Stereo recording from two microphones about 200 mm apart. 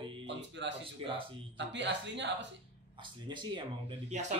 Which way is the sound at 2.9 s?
25° right (ahead or behind).